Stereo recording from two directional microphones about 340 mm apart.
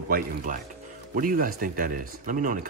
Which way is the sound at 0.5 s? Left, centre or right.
Right.